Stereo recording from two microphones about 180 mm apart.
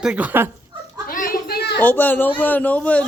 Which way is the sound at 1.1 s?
55° left (ahead or behind).